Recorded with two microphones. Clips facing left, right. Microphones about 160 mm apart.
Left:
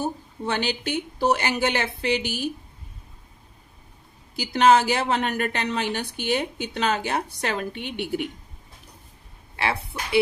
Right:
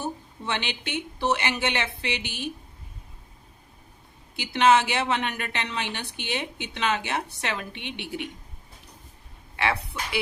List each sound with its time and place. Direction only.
0.0 s a woman's voice: 40° left (ahead or behind)
4.4 s a woman's voice: 40° left (ahead or behind)
9.6 s a woman's voice: 30° left (ahead or behind)